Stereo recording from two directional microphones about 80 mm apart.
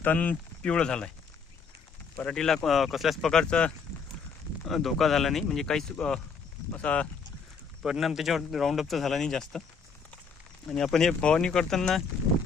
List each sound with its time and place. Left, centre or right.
0.0 s speech: left
2.3 s speech: centre
4.6 s speech: centre
7.9 s speech: centre
10.7 s speech: centre